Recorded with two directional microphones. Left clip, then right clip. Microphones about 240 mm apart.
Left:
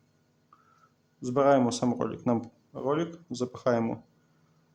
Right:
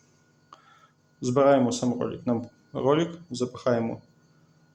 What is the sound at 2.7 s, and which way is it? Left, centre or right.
Speech, centre.